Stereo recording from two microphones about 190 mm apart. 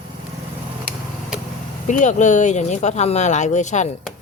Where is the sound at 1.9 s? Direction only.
40° left (ahead or behind).